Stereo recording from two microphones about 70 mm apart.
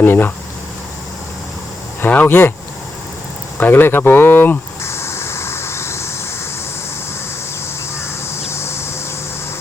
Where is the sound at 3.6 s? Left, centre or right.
Left.